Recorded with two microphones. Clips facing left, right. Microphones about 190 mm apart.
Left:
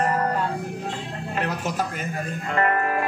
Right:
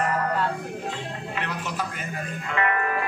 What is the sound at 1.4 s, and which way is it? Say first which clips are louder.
Speech: left 6 dB; 45° left (ahead or behind).